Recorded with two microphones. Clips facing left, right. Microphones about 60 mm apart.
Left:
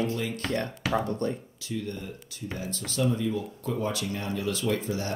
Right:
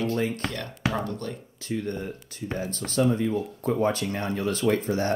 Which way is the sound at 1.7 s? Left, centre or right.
Right.